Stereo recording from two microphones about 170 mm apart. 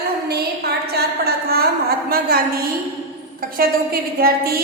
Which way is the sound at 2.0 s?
65° right (ahead or behind).